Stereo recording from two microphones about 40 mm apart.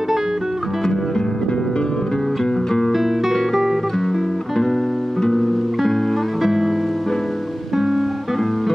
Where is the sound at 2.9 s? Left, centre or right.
Centre.